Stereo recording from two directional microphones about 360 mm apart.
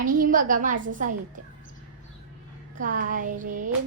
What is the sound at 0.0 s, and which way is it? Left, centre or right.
A woman's voice, right.